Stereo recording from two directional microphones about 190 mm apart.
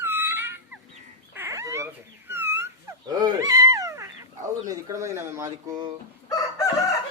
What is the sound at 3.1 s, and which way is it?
Fowl, 20° right (ahead or behind).